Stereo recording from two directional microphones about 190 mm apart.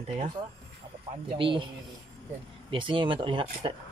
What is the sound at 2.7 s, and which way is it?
Speech, 25° right (ahead or behind).